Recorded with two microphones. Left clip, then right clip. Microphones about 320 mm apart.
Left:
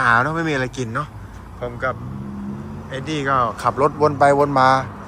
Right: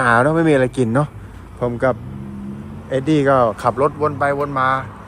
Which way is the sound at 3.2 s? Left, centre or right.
Centre.